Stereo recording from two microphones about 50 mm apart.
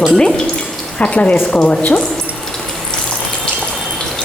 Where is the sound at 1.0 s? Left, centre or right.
Left.